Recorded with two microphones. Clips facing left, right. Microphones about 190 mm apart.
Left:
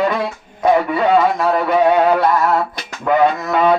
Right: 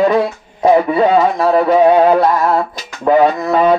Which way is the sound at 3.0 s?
35° right (ahead or behind).